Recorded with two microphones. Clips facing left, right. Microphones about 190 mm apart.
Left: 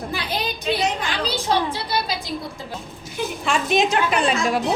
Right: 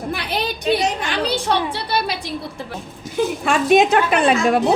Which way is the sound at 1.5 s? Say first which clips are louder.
Right 1 dB; 65° right (ahead or behind).